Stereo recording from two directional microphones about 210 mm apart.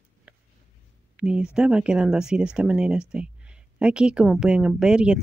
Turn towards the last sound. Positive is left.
turn(degrees=-5)  # may be behind; listen again after turning